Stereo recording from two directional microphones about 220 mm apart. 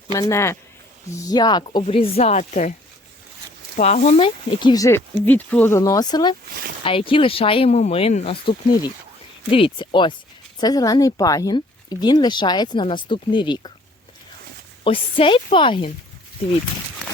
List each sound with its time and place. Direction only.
0.1 s speech: 15° left (ahead or behind); by 2.7 s 35° left (ahead or behind)
3.8 s speech: 30° left (ahead or behind)
14.8 s speech: 25° left (ahead or behind)